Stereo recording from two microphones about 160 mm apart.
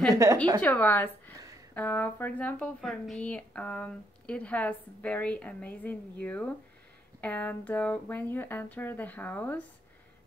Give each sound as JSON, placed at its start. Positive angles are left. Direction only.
{"t": 0.1, "sound": "a woman's voice", "side_deg": -20}
{"t": 0.6, "sound": "speech", "side_deg": 10}